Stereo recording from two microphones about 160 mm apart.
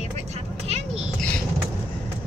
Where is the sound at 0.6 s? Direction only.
40° right (ahead or behind).